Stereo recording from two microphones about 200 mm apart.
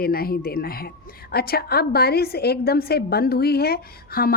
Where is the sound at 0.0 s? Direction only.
50° left (ahead or behind).